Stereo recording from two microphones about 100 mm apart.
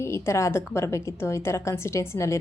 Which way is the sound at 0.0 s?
25° left (ahead or behind).